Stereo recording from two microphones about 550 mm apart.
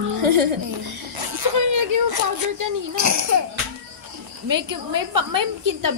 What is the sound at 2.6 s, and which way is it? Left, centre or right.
Speech, right.